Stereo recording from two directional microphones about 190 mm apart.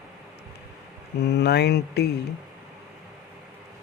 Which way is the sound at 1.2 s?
60° left (ahead or behind).